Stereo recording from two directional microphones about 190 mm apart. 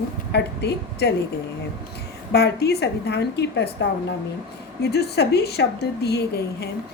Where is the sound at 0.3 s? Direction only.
60° left (ahead or behind).